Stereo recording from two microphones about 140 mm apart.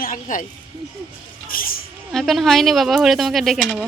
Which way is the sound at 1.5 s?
90° left.